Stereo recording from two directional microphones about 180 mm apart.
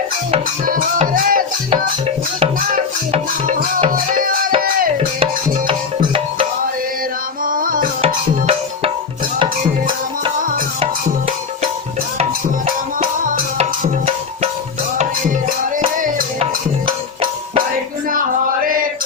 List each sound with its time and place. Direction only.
0.6 s music: 50° right (ahead or behind)
3.1 s music: 40° right (ahead or behind)
4.9 s music: 30° right (ahead or behind)
7.4 s tabla: 50° right (ahead or behind)
8.0 s tabla: 35° right (ahead or behind)
13.0 s music: 50° right (ahead or behind)
18.6 s chant: 50° right (ahead or behind)